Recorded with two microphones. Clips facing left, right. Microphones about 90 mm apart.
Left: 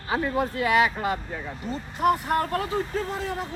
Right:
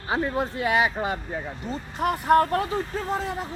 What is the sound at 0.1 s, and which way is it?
Speech, 25° right (ahead or behind).